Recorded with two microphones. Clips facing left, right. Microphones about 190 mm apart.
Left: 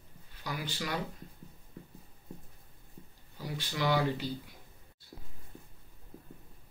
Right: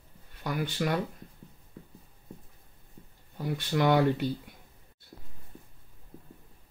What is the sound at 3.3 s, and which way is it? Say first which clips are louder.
Speech: right 8 dB; 55° right (ahead or behind).